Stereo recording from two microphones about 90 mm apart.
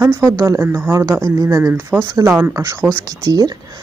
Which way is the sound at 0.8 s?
30° right (ahead or behind).